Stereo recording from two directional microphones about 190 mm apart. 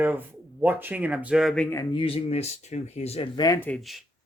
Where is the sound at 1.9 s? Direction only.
30° left (ahead or behind).